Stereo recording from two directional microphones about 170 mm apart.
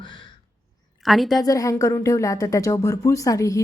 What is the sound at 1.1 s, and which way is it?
Speech, centre (ahead or behind).